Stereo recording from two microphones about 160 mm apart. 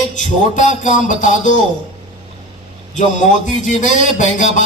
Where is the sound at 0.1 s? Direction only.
50° left (ahead or behind).